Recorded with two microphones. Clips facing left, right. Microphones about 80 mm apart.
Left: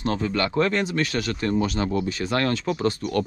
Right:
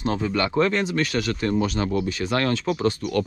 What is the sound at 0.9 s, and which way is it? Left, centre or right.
Speech, left.